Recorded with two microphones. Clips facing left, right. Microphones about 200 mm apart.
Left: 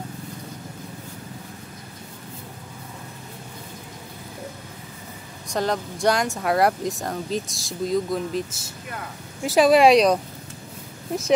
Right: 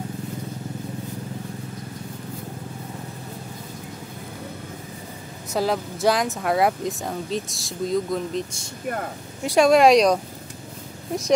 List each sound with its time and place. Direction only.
5.5 s speech: 5° right (ahead or behind)
8.8 s speech: 50° right (ahead or behind)
9.4 s speech: centre (ahead or behind)